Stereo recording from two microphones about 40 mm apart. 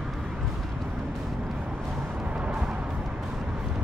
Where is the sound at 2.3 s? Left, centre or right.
Right.